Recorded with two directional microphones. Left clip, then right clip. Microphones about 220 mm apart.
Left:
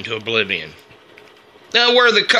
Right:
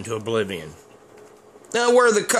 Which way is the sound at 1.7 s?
20° right (ahead or behind).